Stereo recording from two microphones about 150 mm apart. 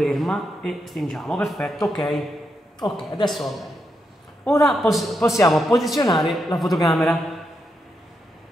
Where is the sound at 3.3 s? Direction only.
Centre (ahead or behind).